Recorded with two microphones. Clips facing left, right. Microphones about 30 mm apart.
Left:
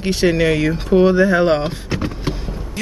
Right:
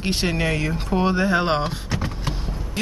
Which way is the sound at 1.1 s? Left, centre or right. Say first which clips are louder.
Left 6 dB; centre.